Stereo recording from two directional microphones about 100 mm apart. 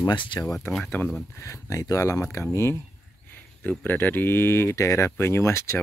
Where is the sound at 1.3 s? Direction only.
30° left (ahead or behind).